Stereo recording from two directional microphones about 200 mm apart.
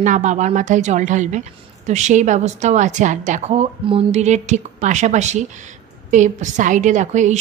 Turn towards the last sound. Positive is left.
turn(degrees=-35)  # may be behind; listen again after turning